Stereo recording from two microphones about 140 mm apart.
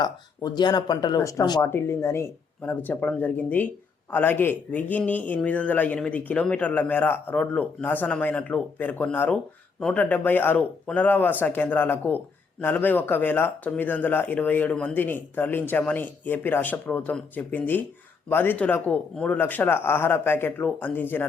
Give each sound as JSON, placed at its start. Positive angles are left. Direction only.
{"t": 0.0, "sound": "speech", "side_deg": 30}